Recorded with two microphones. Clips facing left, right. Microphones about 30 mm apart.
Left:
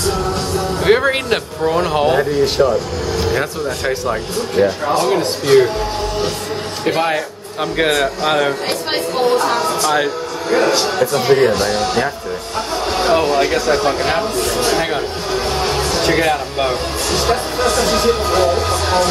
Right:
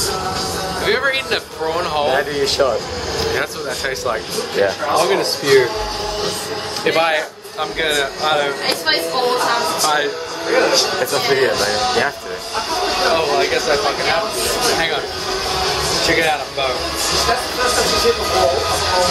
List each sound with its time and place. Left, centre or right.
0.8 s speech: centre
2.3 s speech: right
3.3 s speech: centre
4.6 s speech: right
7.7 s speech: centre
8.6 s speech: right; by 14.3 s centre
14.4 s music: centre
17.1 s speech: right